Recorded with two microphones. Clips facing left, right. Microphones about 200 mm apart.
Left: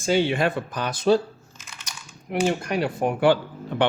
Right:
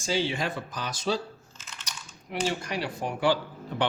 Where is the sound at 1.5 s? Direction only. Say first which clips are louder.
Left 1 dB; 10° left (ahead or behind).